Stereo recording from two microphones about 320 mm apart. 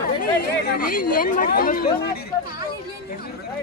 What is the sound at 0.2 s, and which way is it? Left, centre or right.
Speech, left.